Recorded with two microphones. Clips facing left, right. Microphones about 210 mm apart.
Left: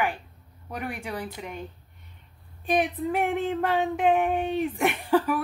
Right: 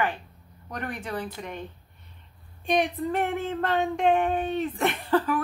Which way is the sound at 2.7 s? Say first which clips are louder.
Even; 5° left (ahead or behind).